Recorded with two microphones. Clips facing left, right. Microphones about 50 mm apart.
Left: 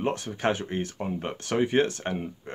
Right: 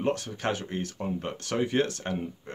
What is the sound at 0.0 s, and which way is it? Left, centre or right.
Speech, centre.